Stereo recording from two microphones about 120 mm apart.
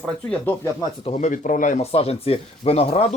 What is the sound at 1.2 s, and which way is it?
Speech, 90° left.